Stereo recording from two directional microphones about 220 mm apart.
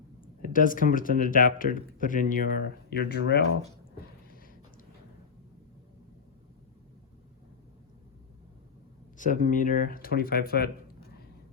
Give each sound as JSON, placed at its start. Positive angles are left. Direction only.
{"t": 0.2, "sound": "speech", "side_deg": 40}
{"t": 9.1, "sound": "speech", "side_deg": 35}